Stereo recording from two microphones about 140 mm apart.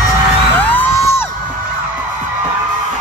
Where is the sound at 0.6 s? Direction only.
15° left (ahead or behind).